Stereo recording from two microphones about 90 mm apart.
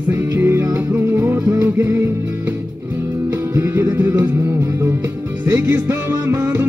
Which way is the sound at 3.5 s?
30° right (ahead or behind).